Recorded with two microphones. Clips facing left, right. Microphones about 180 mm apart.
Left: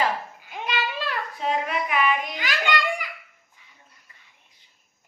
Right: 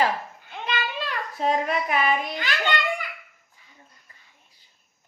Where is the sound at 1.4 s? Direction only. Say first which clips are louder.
Right 3 dB; 40° right (ahead or behind).